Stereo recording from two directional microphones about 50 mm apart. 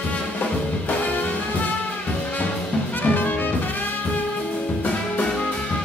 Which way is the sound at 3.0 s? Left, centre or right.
Left.